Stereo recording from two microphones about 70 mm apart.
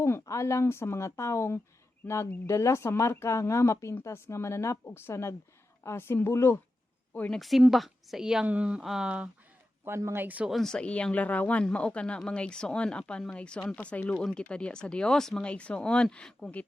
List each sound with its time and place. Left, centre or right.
0.0 s speech: left
7.3 s a woman's voice: centre
8.4 s speech: centre
8.8 s a woman's voice: centre
9.0 s speech: centre
10.5 s speech: centre